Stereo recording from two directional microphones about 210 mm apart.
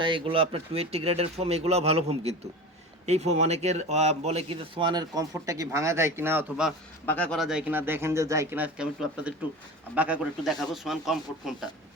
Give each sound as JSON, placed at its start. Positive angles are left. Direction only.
{"t": 0.0, "sound": "speech", "side_deg": -25}
{"t": 7.0, "sound": "a man's voice", "side_deg": 10}